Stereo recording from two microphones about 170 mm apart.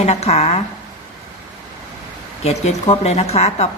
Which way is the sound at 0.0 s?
40° left (ahead or behind).